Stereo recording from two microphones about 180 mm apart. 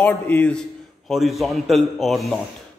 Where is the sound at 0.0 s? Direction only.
10° left (ahead or behind).